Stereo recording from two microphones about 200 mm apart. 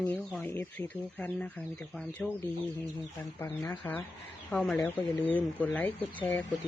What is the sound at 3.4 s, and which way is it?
Speech, 15° left (ahead or behind).